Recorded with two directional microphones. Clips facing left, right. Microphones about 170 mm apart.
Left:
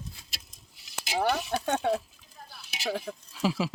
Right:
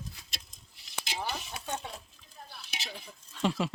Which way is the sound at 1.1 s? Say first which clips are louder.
Left 12 dB; 70° left (ahead or behind).